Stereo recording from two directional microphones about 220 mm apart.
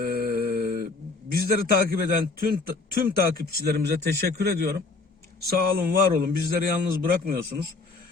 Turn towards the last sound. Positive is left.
turn(degrees=-45)  # may be behind; listen again after turning